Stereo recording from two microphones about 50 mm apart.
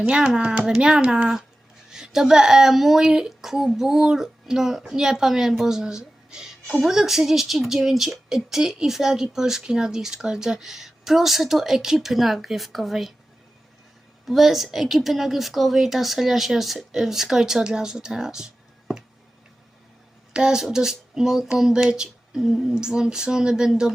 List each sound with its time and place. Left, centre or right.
0.1 s a woman's voice: centre
14.3 s speech: centre
20.3 s speech: centre